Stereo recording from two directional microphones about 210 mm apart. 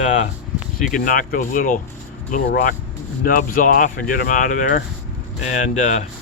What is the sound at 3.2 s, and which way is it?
Speech, 40° left (ahead or behind).